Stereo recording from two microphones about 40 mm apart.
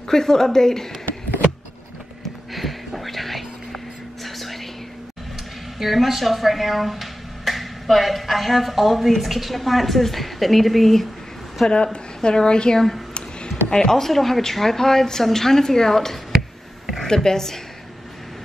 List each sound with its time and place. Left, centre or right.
0.1 s a woman's voice: centre
2.2 s a sound: centre
5.8 s speech: centre
11.7 s a woman's voice: left
16.3 s a sound: centre
17.0 s a woman's voice: centre